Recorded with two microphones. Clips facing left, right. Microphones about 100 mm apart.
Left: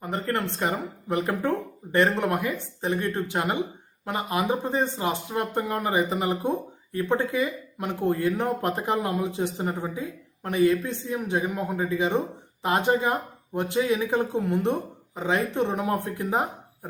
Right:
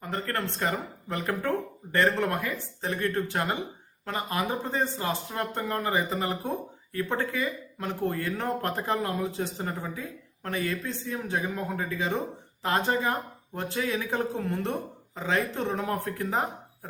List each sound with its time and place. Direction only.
0.0 s speech: 20° left (ahead or behind)